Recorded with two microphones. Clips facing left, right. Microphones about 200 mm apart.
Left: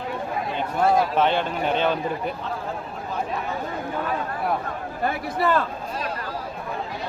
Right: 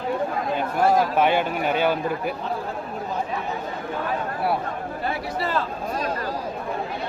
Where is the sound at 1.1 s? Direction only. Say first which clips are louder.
Right 1 dB; 10° right (ahead or behind).